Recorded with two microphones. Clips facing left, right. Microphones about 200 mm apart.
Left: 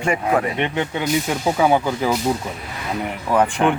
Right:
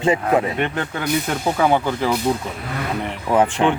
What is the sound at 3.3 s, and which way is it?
Speech, 15° right (ahead or behind).